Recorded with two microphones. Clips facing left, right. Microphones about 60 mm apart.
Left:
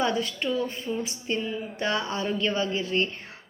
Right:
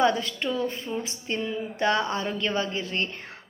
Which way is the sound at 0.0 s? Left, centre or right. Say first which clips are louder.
Right 3 dB; right.